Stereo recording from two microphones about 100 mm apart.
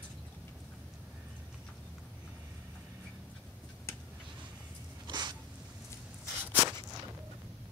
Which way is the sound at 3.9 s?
25° left (ahead or behind).